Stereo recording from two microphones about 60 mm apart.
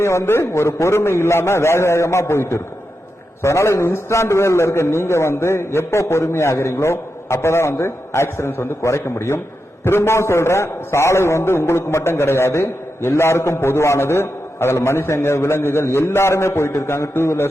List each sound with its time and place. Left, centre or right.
0.0 s a man's voice: left